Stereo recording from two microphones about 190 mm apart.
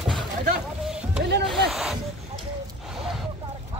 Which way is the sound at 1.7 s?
Centre (ahead or behind).